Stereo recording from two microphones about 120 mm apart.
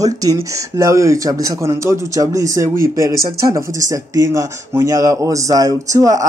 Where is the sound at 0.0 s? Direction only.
30° right (ahead or behind).